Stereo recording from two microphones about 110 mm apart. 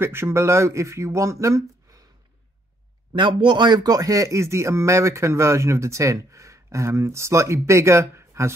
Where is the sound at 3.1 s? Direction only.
45° right (ahead or behind); by 8.5 s 25° right (ahead or behind).